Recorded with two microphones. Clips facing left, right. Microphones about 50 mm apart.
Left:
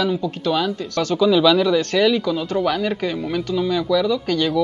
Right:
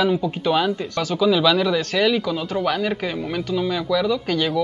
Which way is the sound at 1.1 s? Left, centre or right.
Centre.